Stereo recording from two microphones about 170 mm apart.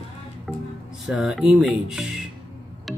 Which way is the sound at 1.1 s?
5° right (ahead or behind).